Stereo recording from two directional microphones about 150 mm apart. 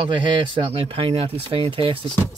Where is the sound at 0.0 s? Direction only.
35° right (ahead or behind).